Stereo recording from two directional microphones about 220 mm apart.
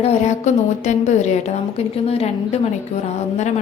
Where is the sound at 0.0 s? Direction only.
30° left (ahead or behind).